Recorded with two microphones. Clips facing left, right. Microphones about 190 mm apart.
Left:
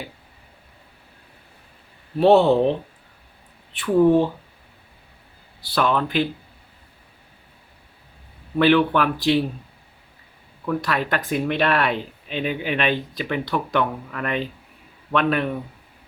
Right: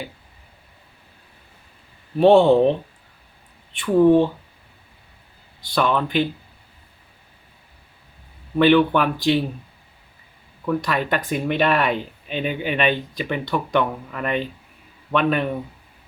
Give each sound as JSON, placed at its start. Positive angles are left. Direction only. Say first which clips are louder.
{"t": 2.1, "sound": "speech", "louder": "right 2 dB", "side_deg": 5}
{"t": 3.7, "sound": "speech", "louder": "right 2 dB", "side_deg": 0}
{"t": 5.6, "sound": "speech", "louder": "even", "side_deg": 5}
{"t": 8.5, "sound": "speech", "louder": "right 2 dB", "side_deg": 0}
{"t": 10.7, "sound": "speech", "louder": "right 1 dB", "side_deg": 0}